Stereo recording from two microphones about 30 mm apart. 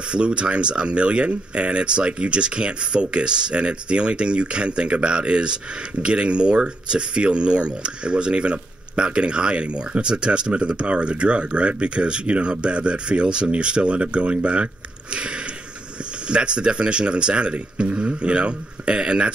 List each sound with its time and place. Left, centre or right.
0.1 s speech: right